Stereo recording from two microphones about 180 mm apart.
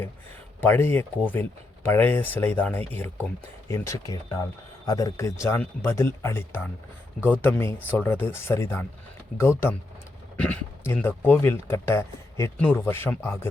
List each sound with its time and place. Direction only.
0.6 s speech: 10° left (ahead or behind)